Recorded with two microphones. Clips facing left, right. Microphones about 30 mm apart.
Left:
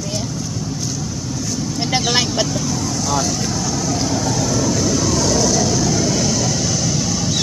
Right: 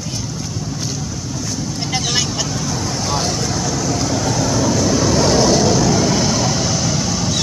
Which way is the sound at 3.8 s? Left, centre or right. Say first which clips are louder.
Even; centre.